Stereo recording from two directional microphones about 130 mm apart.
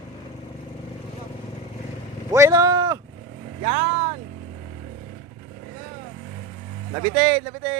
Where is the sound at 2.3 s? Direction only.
25° right (ahead or behind).